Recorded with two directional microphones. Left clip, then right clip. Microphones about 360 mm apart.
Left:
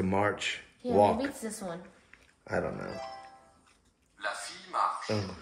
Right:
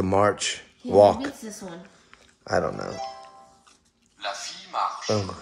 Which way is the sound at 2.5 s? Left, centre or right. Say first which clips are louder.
Right 8 dB; right.